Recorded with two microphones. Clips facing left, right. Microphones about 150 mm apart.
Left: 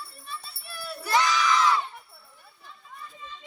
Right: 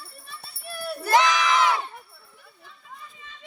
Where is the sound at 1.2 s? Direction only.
75° right (ahead or behind).